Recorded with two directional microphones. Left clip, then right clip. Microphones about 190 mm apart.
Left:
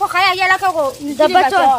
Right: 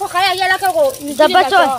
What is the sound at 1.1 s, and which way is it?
Speech, 5° right (ahead or behind).